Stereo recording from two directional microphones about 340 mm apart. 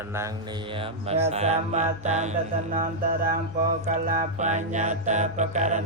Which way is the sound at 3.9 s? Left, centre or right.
Right.